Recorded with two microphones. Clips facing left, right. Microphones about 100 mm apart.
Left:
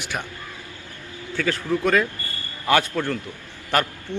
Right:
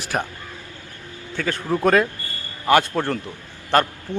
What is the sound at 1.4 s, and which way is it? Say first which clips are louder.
Speech: left 1 dB; 20° right (ahead or behind).